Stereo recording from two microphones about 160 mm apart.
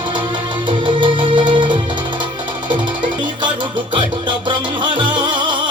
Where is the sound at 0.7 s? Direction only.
30° right (ahead or behind).